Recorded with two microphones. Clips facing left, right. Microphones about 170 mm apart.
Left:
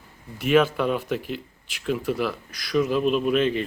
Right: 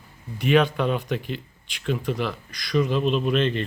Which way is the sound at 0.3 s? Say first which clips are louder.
Even; 5° left (ahead or behind).